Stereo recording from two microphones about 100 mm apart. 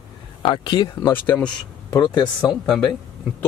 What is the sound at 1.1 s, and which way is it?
Speech, 10° left (ahead or behind).